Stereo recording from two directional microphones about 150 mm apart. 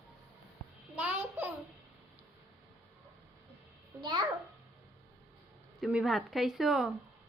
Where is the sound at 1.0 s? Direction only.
10° right (ahead or behind).